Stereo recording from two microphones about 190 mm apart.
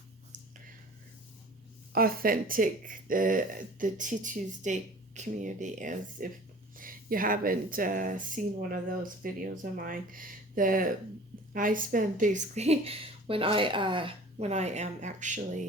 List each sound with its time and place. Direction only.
1.9 s a woman's voice: 50° right (ahead or behind)